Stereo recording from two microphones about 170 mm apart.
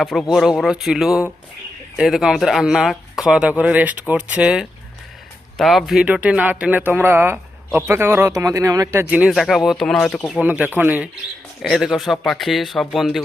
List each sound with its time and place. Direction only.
0.0 s speech: centre (ahead or behind)
10.4 s speech: 10° right (ahead or behind)
11.6 s speech: centre (ahead or behind)